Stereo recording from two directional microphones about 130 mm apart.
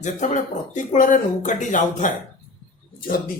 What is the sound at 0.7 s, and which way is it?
Speech, 80° left.